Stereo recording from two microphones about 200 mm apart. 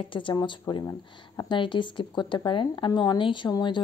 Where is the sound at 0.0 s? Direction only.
25° left (ahead or behind).